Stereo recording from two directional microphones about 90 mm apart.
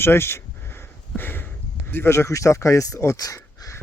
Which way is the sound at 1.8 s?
25° left (ahead or behind).